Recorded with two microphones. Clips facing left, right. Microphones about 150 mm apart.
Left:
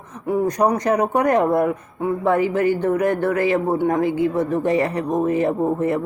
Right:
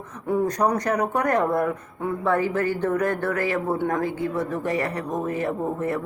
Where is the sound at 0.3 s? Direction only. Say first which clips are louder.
Left 3 dB; 10° left (ahead or behind).